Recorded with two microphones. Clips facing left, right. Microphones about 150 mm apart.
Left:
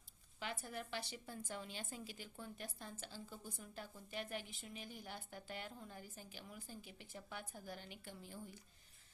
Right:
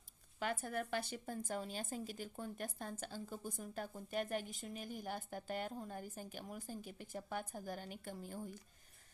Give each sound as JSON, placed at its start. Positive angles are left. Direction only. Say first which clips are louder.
{"t": 0.3, "sound": "a woman's voice", "louder": "right 7 dB", "side_deg": -50}